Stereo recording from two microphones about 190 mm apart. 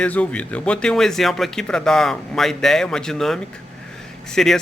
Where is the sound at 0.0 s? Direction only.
5° left (ahead or behind).